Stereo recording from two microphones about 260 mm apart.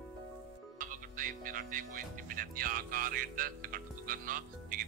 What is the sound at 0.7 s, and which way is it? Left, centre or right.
Music, right.